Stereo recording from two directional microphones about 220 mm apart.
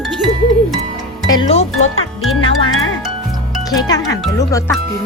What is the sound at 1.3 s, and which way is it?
Speech, 25° left (ahead or behind).